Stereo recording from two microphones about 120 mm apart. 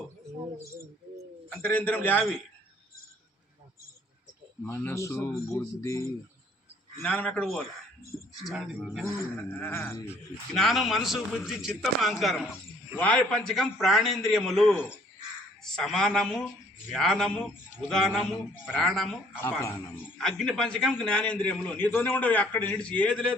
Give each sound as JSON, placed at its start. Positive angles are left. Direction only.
{"t": 1.5, "sound": "a man's voice", "side_deg": 15}
{"t": 4.6, "sound": "a man's voice", "side_deg": 15}
{"t": 7.0, "sound": "a man's voice", "side_deg": 10}
{"t": 8.4, "sound": "a man's voice", "side_deg": -5}
{"t": 9.6, "sound": "a man's voice", "side_deg": 15}
{"t": 10.5, "sound": "a man's voice", "side_deg": 0}
{"t": 13.0, "sound": "a man's voice", "side_deg": 10}
{"t": 19.4, "sound": "a man's voice", "side_deg": 15}
{"t": 20.1, "sound": "a man's voice", "side_deg": 5}